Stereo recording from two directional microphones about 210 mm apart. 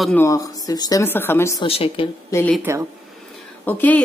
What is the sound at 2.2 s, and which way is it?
Speech, 10° left (ahead or behind).